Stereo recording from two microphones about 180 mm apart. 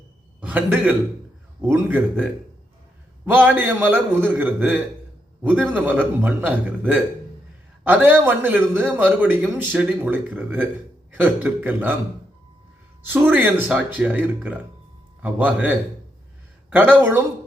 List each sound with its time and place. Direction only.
0.3 s a man's voice: 10° right (ahead or behind)
13.0 s a man's voice: 10° right (ahead or behind)